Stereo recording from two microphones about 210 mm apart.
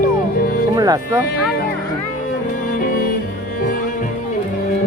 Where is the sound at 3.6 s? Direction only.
40° left (ahead or behind).